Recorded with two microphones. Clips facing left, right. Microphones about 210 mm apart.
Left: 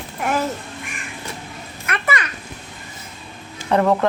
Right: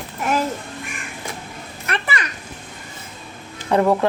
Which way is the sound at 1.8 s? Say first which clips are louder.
Left 1 dB; 30° right (ahead or behind).